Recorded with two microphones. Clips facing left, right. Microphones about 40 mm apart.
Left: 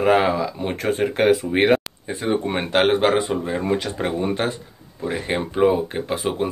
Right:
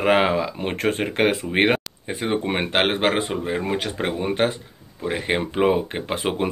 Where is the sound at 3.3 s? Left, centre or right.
Right.